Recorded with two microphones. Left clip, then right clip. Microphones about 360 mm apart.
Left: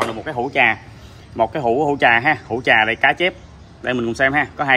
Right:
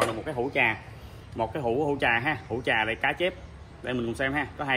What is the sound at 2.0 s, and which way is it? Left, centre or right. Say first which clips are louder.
Speech: left 11 dB; centre.